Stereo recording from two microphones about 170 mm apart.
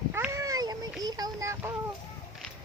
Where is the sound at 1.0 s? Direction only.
20° right (ahead or behind).